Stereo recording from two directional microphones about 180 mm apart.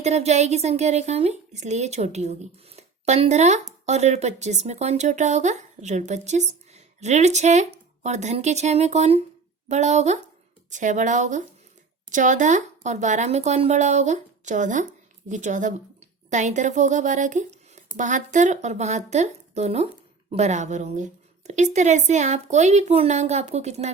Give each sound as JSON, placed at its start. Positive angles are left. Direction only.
{"t": 0.0, "sound": "a woman's voice", "side_deg": -40}